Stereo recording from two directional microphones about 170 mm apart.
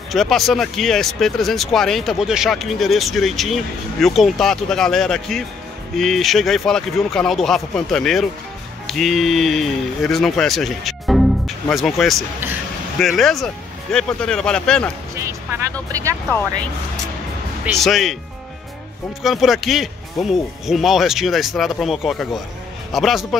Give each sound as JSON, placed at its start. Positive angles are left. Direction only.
{"t": 0.1, "sound": "speech", "side_deg": 0}
{"t": 15.9, "sound": "speech", "side_deg": -20}
{"t": 17.7, "sound": "speech", "side_deg": 0}
{"t": 19.2, "sound": "speech", "side_deg": 0}